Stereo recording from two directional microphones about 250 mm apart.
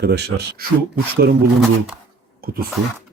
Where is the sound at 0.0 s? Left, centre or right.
Right.